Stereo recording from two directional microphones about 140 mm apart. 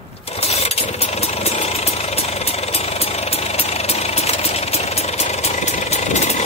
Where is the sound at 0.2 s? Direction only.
45° left (ahead or behind).